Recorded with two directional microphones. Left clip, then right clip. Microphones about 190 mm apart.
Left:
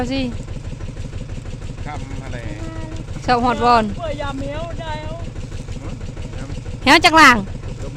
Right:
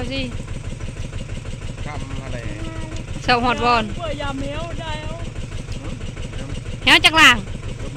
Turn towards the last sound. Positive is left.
turn(degrees=40)  # may be behind; listen again after turning